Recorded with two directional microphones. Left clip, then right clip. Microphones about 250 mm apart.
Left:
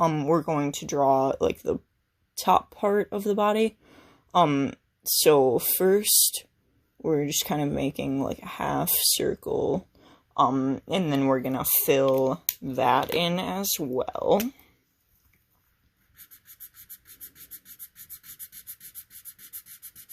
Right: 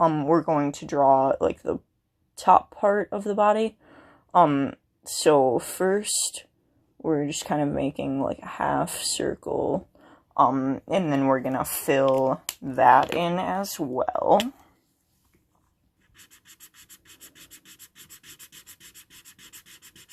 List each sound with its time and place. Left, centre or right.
0.0 s speech: left
16.3 s sanding: centre
19.4 s sanding: centre